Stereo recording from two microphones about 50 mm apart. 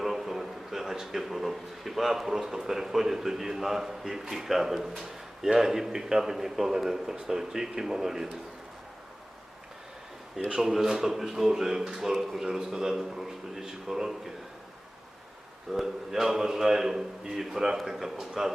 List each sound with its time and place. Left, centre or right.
0.0 s a man's voice: centre
10.5 s a man's voice: centre
15.7 s a man's voice: centre